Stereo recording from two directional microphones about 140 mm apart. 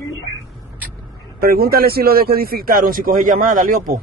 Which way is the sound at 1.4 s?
90° right.